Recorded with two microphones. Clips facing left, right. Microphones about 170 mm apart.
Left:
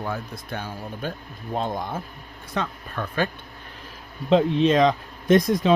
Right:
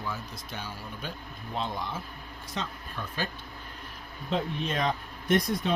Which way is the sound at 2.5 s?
60° left (ahead or behind).